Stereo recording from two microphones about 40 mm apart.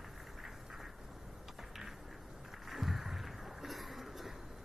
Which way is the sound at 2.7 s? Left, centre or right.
Centre.